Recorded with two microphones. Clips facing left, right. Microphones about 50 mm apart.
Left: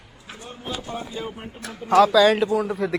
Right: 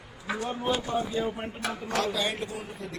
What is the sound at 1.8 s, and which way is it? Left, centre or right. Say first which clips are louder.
Speech: left 15 dB; left.